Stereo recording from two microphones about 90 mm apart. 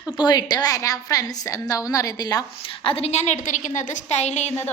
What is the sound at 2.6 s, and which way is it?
Speech, 90° left.